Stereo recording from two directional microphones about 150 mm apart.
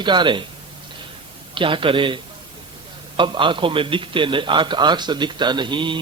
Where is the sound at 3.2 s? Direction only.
35° right (ahead or behind).